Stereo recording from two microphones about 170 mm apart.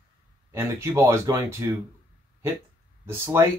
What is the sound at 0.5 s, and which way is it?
Speech, 15° right (ahead or behind).